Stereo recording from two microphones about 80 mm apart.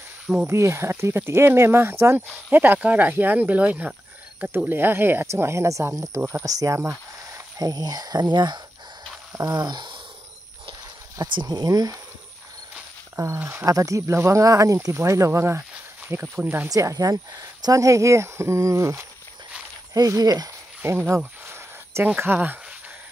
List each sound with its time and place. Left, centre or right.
0.5 s speech: right
7.5 s speech: right
11.3 s speech: right
13.1 s speech: right
13.7 s speech: right
16.6 s speech: right
20.8 s speech: right
21.5 s a sound: right
22.0 s speech: right